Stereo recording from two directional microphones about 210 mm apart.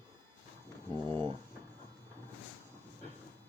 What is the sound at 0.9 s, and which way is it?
Speech, 20° right (ahead or behind).